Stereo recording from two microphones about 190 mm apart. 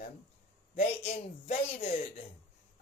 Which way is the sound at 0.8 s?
35° left (ahead or behind).